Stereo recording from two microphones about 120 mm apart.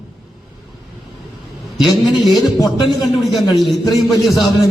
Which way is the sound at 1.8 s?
Centre (ahead or behind).